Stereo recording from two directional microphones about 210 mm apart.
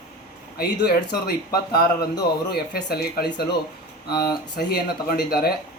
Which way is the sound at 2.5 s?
50° left (ahead or behind).